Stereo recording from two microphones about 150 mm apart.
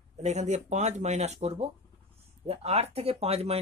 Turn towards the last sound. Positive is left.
turn(degrees=-45)  # may be behind; listen again after turning